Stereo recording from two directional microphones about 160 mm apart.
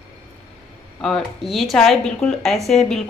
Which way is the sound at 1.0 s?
Centre (ahead or behind).